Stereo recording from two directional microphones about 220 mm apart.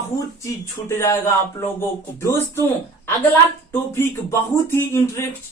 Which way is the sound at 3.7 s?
10° left (ahead or behind).